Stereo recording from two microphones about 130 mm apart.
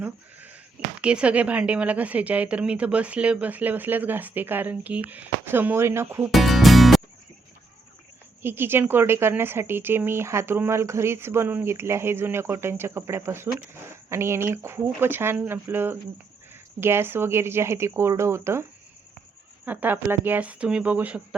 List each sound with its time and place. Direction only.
0.0 s bleat: 15° right (ahead or behind)
1.0 s a woman's voice: 10° right (ahead or behind)
6.3 s music: centre (ahead or behind)
8.4 s speech: 15° right (ahead or behind)
19.6 s a woman's voice: 15° right (ahead or behind)